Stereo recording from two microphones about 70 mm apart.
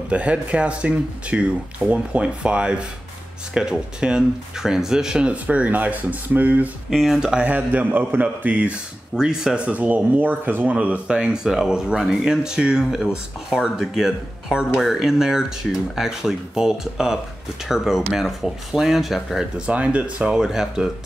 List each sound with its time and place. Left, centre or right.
0.1 s speech: centre
6.9 s speech: centre
7.4 s speech: right
9.1 s speech: centre
9.7 s speech: right; by 19.6 s centre
19.6 s speech: centre